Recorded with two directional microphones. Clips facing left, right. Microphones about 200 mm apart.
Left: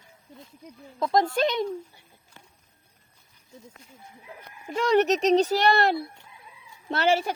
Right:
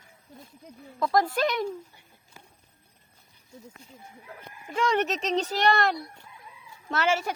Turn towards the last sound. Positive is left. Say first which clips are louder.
# left 3 dB
turn(degrees=35)  # may be behind; listen again after turning